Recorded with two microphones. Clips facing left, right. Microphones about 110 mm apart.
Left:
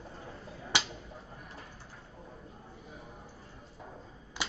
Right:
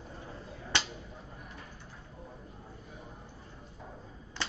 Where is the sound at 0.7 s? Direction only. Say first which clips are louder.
Left 1 dB; 10° left (ahead or behind).